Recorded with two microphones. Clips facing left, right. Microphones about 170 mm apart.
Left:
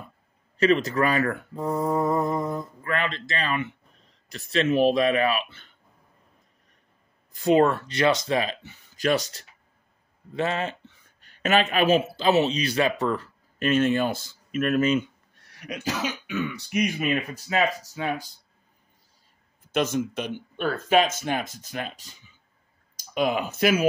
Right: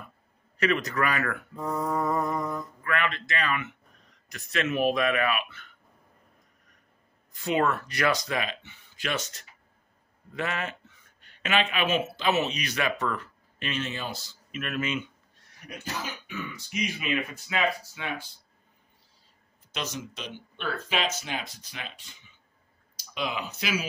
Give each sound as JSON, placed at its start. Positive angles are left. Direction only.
{"t": 0.6, "sound": "speech", "side_deg": 30}
{"t": 7.3, "sound": "speech", "side_deg": 35}
{"t": 13.7, "sound": "speech", "side_deg": 50}
{"t": 15.4, "sound": "speech", "side_deg": 85}
{"t": 19.7, "sound": "speech", "side_deg": 50}